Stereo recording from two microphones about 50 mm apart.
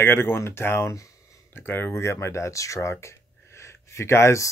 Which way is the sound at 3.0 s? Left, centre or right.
Left.